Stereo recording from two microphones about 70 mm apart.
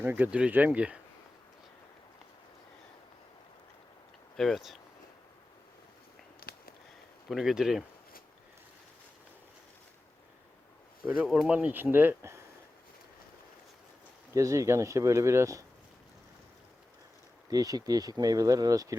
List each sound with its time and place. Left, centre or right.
0.0 s speech: right
0.3 s speech: centre
4.4 s speech: centre
7.3 s speech: centre
11.3 s speech: centre; by 12.4 s right
14.3 s speech: right
17.5 s speech: right